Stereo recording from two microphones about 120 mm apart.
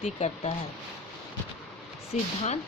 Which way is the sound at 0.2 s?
65° left (ahead or behind).